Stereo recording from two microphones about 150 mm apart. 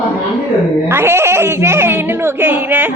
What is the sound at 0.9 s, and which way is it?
Speech, 15° right (ahead or behind).